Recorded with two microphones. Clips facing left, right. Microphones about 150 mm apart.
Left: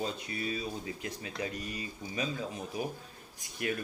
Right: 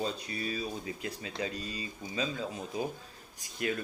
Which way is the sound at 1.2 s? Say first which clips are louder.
Right 1 dB; 20° right (ahead or behind).